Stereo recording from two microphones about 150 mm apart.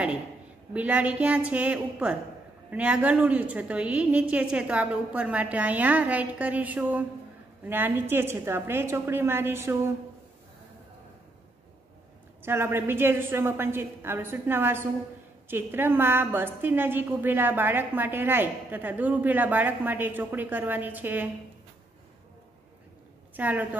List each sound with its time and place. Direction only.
0.7 s a woman's voice: 10° right (ahead or behind)
12.4 s a woman's voice: 15° right (ahead or behind)
23.3 s a woman's voice: 10° right (ahead or behind)